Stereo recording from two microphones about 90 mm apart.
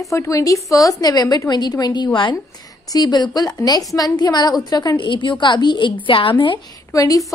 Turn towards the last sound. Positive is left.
turn(degrees=40)  # may be behind; listen again after turning